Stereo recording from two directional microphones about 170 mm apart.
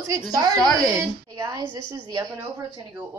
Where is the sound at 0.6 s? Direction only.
5° left (ahead or behind).